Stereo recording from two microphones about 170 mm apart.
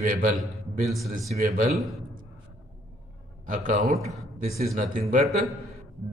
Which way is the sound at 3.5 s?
50° right (ahead or behind).